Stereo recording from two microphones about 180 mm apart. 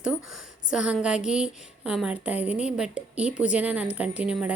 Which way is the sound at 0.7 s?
5° right (ahead or behind).